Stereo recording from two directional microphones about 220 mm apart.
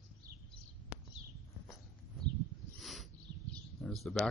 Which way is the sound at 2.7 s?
Centre (ahead or behind).